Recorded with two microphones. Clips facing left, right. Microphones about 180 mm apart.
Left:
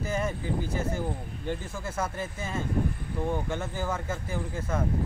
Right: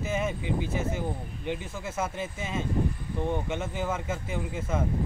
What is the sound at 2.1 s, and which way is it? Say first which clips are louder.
Speech: right 1 dB; 20° right (ahead or behind).